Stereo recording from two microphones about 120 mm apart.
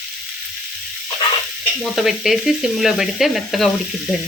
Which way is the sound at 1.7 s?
Centre (ahead or behind).